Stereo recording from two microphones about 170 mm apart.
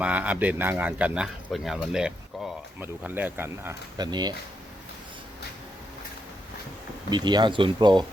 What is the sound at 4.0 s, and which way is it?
Speech, 25° right (ahead or behind).